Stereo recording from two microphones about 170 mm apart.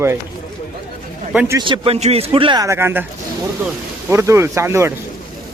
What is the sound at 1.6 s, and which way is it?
A man's voice, 30° right (ahead or behind).